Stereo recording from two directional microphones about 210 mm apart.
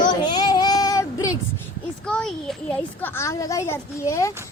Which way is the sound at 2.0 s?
5° left (ahead or behind).